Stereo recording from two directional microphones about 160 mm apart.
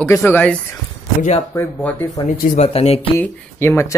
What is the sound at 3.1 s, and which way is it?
Speech, 15° left (ahead or behind).